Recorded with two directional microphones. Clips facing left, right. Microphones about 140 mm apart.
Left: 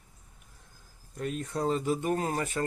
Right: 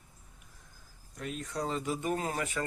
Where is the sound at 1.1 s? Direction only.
35° left (ahead or behind).